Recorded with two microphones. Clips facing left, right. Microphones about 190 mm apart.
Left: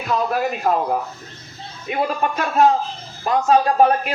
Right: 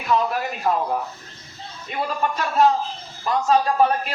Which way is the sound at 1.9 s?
50° left (ahead or behind).